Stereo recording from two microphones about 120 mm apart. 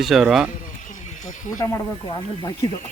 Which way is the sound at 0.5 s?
90° left.